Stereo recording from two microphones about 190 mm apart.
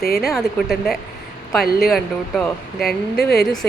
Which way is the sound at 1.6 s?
55° left (ahead or behind).